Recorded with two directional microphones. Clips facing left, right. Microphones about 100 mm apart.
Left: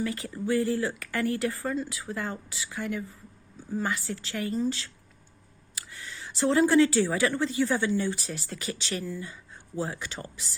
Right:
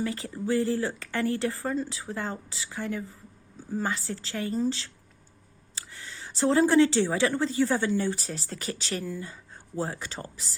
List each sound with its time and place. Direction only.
0.0 s speech: 25° right (ahead or behind)